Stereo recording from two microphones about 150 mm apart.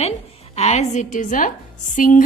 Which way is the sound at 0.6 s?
45° left (ahead or behind).